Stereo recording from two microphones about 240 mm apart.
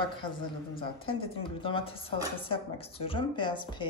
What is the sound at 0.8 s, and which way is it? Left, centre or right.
A woman's voice, left.